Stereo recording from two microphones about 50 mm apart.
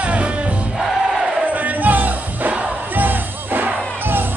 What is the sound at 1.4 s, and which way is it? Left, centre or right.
Music, right.